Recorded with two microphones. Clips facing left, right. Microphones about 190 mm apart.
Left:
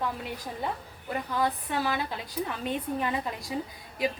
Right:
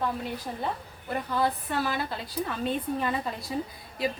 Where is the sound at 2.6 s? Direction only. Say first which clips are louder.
Right 2 dB; 15° left (ahead or behind).